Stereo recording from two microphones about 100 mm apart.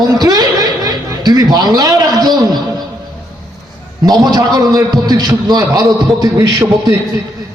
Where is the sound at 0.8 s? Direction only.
40° right (ahead or behind).